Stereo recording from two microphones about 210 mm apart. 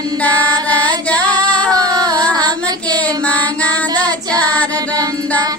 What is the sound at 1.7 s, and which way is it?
Child singing, 20° right (ahead or behind).